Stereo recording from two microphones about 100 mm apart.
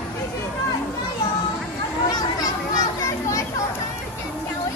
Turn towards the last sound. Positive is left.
turn(degrees=35)  # may be behind; listen again after turning